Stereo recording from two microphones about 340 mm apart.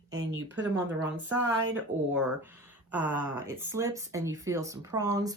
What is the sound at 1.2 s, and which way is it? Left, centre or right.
Speech, centre.